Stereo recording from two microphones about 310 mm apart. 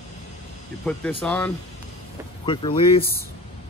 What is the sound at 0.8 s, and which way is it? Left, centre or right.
Speech, centre.